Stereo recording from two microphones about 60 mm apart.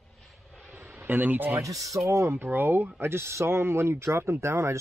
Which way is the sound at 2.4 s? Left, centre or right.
Right.